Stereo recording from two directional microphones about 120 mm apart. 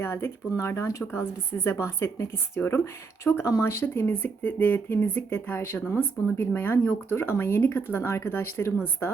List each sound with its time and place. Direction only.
0.0 s speech: 20° left (ahead or behind)